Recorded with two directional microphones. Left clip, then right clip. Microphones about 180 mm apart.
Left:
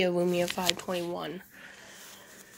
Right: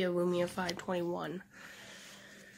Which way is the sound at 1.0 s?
30° right (ahead or behind).